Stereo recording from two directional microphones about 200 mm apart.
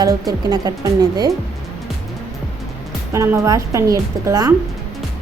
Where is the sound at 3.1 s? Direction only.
15° right (ahead or behind).